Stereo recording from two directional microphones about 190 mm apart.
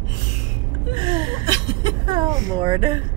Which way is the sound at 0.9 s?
25° right (ahead or behind).